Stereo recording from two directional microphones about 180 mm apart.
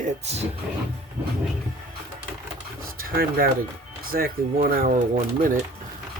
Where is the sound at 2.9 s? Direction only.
55° right (ahead or behind).